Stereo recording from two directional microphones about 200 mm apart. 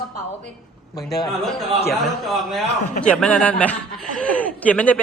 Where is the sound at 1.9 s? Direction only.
Centre (ahead or behind).